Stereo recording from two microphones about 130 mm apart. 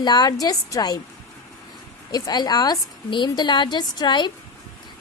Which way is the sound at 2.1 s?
30° left (ahead or behind).